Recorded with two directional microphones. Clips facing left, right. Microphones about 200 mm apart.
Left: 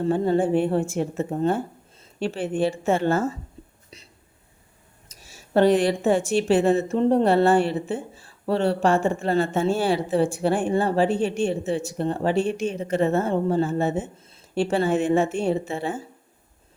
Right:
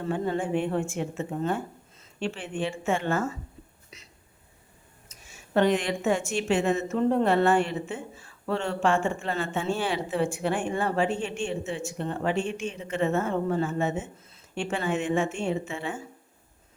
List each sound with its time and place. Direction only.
0.0 s a woman's voice: 30° left (ahead or behind)
3.8 s a sound: 30° left (ahead or behind)
5.0 s a woman's voice: 35° left (ahead or behind)